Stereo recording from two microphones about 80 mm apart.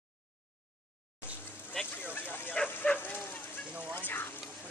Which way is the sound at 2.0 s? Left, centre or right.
Left.